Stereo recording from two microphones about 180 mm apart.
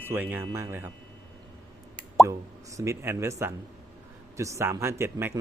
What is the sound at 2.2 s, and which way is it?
Speech, 15° right (ahead or behind).